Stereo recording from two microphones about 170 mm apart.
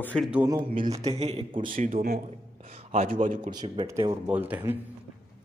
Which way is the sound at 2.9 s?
40° right (ahead or behind).